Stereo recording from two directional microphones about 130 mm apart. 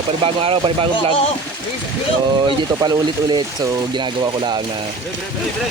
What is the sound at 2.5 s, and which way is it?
Speech, 35° right (ahead or behind).